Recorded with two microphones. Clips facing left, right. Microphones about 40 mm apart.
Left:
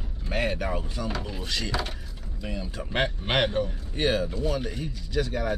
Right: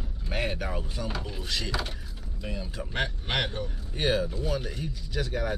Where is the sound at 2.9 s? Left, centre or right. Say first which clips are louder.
Left 4 dB; left.